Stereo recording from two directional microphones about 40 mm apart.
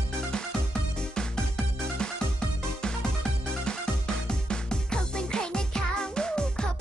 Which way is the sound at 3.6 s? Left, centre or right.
Centre.